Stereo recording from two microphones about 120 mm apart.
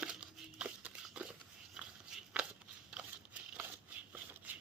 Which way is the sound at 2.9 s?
10° right (ahead or behind).